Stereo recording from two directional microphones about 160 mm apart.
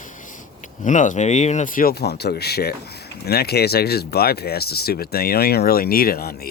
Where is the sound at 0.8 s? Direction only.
50° left (ahead or behind).